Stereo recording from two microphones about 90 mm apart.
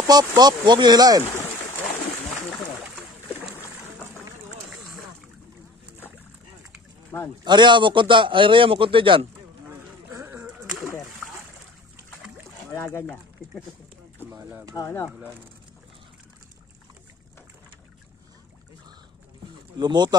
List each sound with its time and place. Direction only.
0.0 s speech: 50° right (ahead or behind)
7.1 s speech: 30° left (ahead or behind)
7.4 s a man's voice: 60° right (ahead or behind); by 9.3 s 75° right (ahead or behind)
12.7 s speech: 35° left (ahead or behind)
14.8 s speech: 30° left (ahead or behind)
19.8 s speech: 55° right (ahead or behind)